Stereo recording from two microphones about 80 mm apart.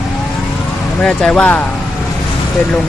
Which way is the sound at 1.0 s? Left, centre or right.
Centre.